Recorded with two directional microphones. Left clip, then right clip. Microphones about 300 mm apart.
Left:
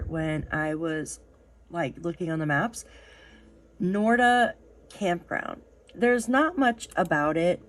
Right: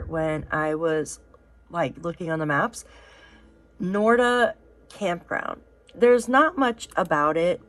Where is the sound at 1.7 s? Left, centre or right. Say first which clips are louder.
Right 4 dB; centre.